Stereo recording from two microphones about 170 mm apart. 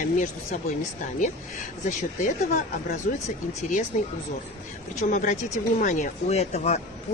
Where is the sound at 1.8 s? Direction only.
45° left (ahead or behind).